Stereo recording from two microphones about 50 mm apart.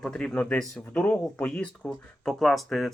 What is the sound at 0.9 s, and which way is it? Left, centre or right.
Speech, left.